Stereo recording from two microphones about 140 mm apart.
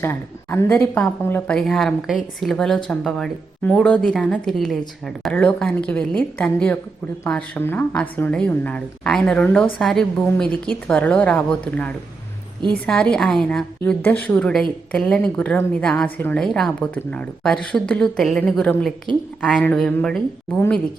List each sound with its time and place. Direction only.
0.0 s a woman's voice: 15° left (ahead or behind)
1.5 s a woman's voice: centre (ahead or behind)
5.3 s a woman's voice: 10° left (ahead or behind)